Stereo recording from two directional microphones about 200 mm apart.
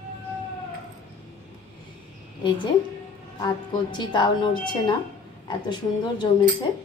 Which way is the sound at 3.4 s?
20° left (ahead or behind).